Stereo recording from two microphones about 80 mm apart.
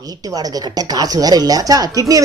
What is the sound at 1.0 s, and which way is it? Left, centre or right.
Speech, right.